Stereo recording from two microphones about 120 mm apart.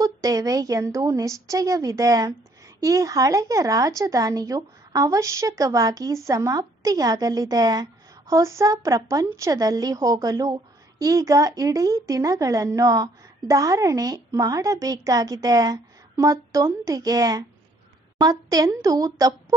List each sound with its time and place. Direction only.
0.0 s a woman's voice: 30° right (ahead or behind)